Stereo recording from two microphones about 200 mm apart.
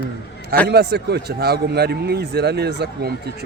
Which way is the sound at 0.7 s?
55° right (ahead or behind).